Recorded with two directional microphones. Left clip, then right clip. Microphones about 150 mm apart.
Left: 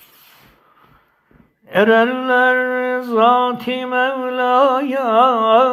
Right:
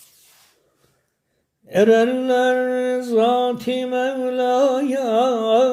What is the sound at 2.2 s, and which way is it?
Music, 40° right (ahead or behind).